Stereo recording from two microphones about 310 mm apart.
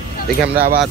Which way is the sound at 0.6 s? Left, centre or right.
Right.